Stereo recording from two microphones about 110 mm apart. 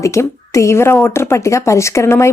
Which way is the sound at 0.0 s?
25° left (ahead or behind).